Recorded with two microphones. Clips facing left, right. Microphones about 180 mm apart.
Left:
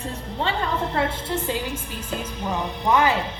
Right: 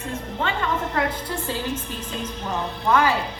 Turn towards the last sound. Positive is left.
turn(degrees=20)  # may be behind; listen again after turning